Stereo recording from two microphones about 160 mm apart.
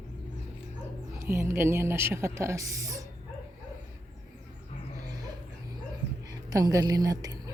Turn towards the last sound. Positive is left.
turn(degrees=-20)  # may be behind; listen again after turning